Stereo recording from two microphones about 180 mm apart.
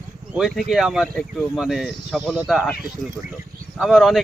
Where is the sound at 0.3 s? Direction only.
Centre (ahead or behind).